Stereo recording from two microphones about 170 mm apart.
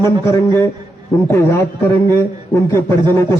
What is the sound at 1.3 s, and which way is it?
A man's voice, 15° left (ahead or behind).